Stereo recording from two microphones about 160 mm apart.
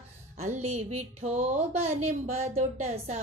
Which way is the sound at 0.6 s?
45° right (ahead or behind).